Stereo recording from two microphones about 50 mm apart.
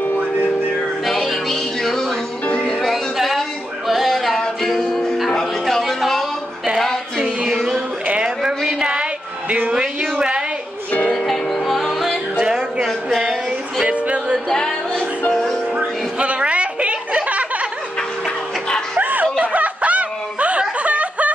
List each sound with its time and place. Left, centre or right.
1.0 s music: centre
5.8 s a sound: centre
7.2 s music: centre
8.2 s a sound: centre
11.1 s music: centre
12.4 s music: centre
13.8 s music: right
14.5 s music: centre
16.2 s a sound: right
18.9 s snicker: right